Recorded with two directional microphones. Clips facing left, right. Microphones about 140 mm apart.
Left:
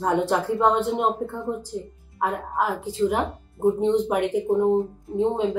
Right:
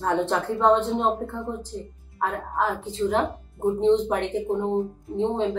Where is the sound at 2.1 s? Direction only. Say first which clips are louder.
Left 1 dB; 10° left (ahead or behind).